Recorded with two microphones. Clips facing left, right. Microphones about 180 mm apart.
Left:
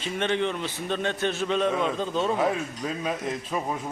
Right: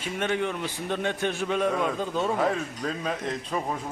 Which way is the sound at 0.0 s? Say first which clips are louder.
Left 1 dB; 10° right (ahead or behind).